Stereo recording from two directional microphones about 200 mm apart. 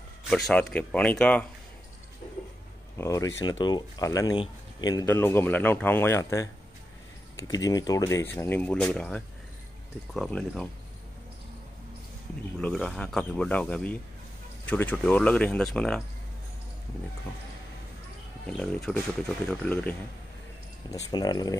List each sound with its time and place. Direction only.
0.3 s speech: 5° left (ahead or behind)
3.0 s speech: 15° left (ahead or behind)
12.5 s speech: 5° left (ahead or behind)
18.5 s speech: 5° left (ahead or behind)
20.9 s speech: 20° left (ahead or behind)